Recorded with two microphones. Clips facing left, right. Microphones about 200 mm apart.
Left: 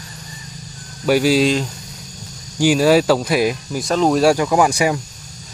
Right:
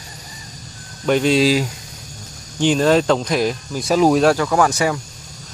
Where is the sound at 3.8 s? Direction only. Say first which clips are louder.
Right 2 dB; 5° right (ahead or behind).